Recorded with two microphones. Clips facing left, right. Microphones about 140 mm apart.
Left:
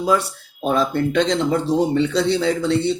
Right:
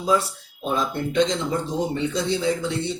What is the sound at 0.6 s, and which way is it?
A man's voice, 75° left (ahead or behind).